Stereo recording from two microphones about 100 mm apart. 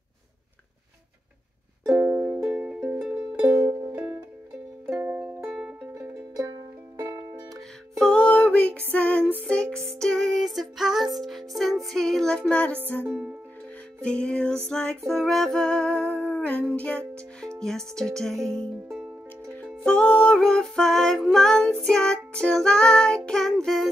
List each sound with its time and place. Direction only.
2.0 s music: 15° right (ahead or behind)
3.6 s music: 35° right (ahead or behind)
5.0 s music: 20° right (ahead or behind)
5.5 s music: 5° right (ahead or behind)
7.5 s music: centre (ahead or behind)
8.1 s music: 10° left (ahead or behind)
13.0 s music: 15° right (ahead or behind)
14.0 s music: 10° left (ahead or behind)